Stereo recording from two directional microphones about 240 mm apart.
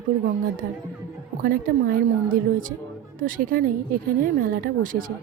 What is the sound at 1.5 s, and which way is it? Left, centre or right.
A woman's voice, right.